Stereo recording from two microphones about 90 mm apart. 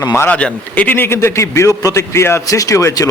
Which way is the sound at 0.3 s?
15° left (ahead or behind).